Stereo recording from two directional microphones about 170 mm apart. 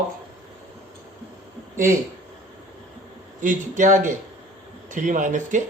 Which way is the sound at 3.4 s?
50° right (ahead or behind).